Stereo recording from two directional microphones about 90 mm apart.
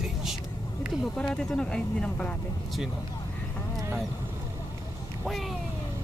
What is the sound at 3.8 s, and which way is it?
Vehicle, 30° right (ahead or behind).